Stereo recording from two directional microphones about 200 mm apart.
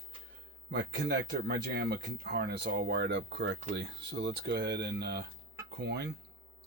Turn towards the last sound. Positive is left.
turn(degrees=-55)  # may be behind; listen again after turning